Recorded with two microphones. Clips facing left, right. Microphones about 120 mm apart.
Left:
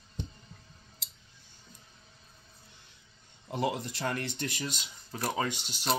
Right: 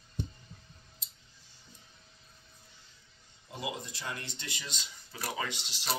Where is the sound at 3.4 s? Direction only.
60° left (ahead or behind); by 5.8 s 45° left (ahead or behind).